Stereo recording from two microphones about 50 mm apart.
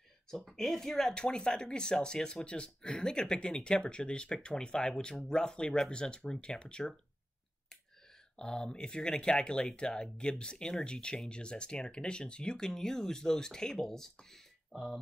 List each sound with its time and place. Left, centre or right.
0.3 s speech: centre
8.4 s speech: centre